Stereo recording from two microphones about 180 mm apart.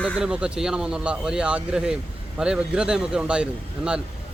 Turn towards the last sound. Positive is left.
turn(degrees=-5)  # may be behind; listen again after turning